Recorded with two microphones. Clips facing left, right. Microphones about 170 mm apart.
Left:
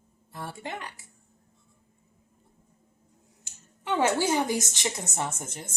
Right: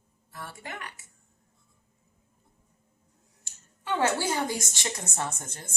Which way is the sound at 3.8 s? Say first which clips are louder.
Left 2 dB; 20° left (ahead or behind).